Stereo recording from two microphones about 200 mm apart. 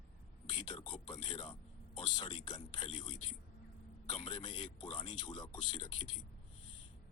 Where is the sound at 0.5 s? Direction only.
25° left (ahead or behind).